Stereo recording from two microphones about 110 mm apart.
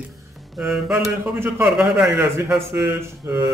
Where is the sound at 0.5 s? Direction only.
5° right (ahead or behind).